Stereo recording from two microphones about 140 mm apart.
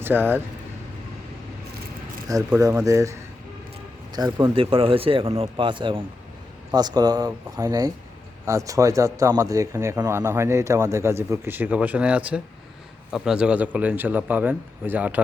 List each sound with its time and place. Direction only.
0.0 s speech: 15° right (ahead or behind)
2.6 s a man's voice: 25° right (ahead or behind)